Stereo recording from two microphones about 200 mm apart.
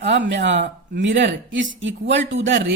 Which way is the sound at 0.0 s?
60° right (ahead or behind).